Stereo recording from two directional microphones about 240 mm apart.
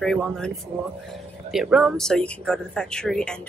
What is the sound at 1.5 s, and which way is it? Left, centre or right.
A woman's voice, centre.